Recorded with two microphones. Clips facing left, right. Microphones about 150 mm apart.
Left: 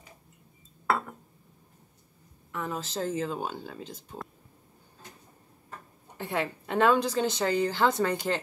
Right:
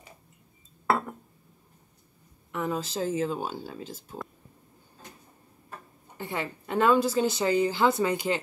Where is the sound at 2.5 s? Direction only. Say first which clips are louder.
Right 3 dB; 15° right (ahead or behind).